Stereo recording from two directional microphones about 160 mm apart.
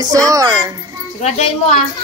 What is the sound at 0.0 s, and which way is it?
Speech, 20° right (ahead or behind).